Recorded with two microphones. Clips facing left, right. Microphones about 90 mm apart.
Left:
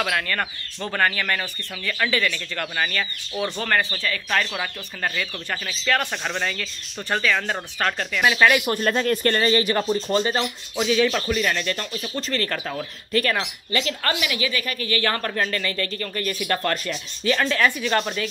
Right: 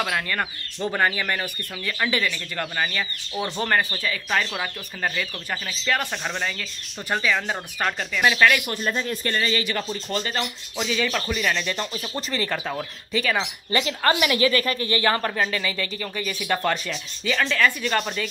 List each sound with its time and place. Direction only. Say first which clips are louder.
0.0 s speech: left 1 dB; 10° right (ahead or behind); by 8.5 s 5° left (ahead or behind)
8.7 s speech: left 5 dB; 70° left (ahead or behind)
9.4 s speech: left 5 dB; 40° left (ahead or behind)
9.9 s speech: left 6 dB; 25° left (ahead or behind)
10.8 s speech: left 5 dB; 5° left (ahead or behind)
13.7 s speech: right 4 dB; 20° right (ahead or behind)
14.1 s a woman's voice: right 5 dB; 40° right (ahead or behind)
14.8 s speech: right 2 dB; 25° right (ahead or behind); by 18.3 s centre (ahead or behind)